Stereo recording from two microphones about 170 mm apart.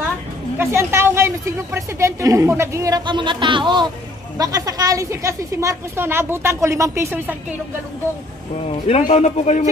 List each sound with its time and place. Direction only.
0.6 s a woman's voice: 15° right (ahead or behind)
8.6 s speech: 40° left (ahead or behind)